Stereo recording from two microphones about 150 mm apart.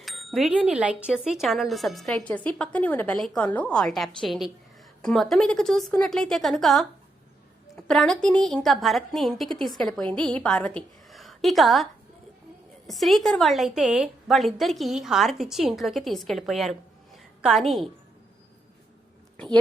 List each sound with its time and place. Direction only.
0.0 s a woman's voice: centre (ahead or behind)
12.9 s a woman's voice: centre (ahead or behind)